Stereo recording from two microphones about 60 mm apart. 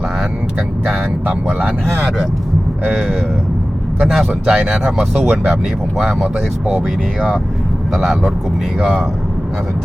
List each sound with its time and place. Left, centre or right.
1.5 s speech: right
2.9 s speech: centre
7.9 s speech: centre